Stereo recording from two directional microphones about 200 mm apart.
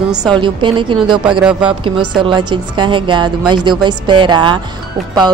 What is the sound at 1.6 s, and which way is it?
Speech, 25° right (ahead or behind).